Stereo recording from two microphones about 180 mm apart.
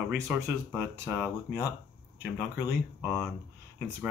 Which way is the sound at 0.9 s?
15° right (ahead or behind).